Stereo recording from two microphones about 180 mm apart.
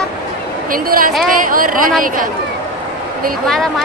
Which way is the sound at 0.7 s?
50° right (ahead or behind).